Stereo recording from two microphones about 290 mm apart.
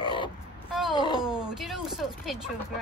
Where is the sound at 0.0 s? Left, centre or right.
Centre.